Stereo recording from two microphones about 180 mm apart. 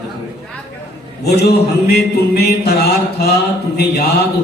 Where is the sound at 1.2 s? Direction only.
60° left (ahead or behind).